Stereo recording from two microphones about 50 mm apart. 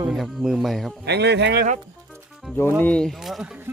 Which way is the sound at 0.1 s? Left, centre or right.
Centre.